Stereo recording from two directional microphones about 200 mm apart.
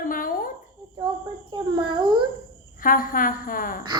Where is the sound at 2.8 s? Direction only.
45° left (ahead or behind).